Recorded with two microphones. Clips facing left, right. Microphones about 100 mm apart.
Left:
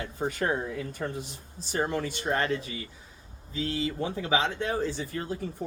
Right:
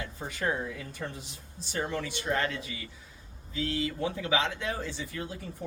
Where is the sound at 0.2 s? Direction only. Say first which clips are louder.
Left 4 dB; 50° left (ahead or behind).